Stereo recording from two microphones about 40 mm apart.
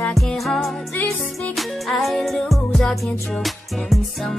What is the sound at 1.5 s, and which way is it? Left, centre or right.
Zing, centre.